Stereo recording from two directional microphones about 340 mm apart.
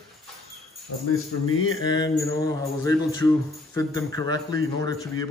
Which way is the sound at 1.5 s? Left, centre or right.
Left.